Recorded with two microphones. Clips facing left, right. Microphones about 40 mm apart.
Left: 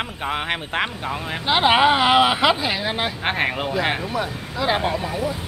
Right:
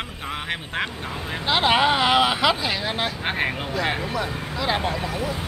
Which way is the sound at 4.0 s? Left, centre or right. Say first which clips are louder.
Left 1 dB; centre.